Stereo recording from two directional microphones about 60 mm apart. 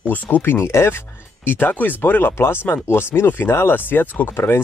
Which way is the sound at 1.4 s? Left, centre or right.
Left.